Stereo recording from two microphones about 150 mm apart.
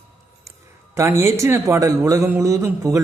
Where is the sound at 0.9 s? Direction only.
20° right (ahead or behind).